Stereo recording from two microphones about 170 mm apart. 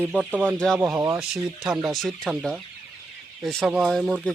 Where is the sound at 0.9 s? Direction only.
20° right (ahead or behind).